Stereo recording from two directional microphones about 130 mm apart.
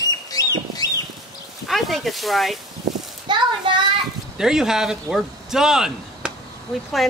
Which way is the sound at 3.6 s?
40° right (ahead or behind).